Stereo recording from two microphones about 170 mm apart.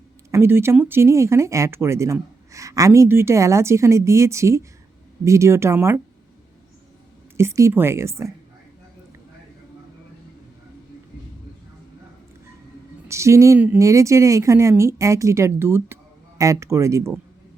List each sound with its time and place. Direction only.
0.3 s speech: 15° right (ahead or behind)
7.3 s speech: 15° right (ahead or behind)
13.1 s speech: 15° right (ahead or behind)